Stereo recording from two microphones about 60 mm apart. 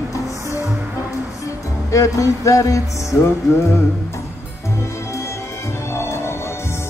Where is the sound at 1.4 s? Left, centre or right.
Left.